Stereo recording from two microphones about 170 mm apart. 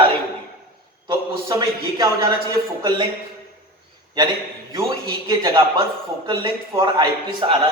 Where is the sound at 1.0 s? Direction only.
20° right (ahead or behind).